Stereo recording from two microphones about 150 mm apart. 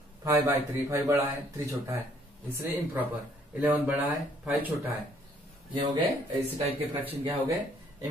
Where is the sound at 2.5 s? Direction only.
15° right (ahead or behind).